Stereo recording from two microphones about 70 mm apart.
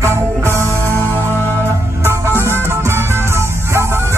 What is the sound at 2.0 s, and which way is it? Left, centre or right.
Music, right.